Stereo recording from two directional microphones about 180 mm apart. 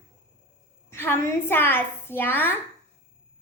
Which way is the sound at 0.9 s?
15° left (ahead or behind).